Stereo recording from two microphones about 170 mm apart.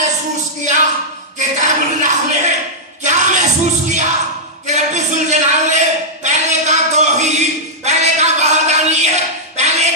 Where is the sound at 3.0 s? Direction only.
45° right (ahead or behind).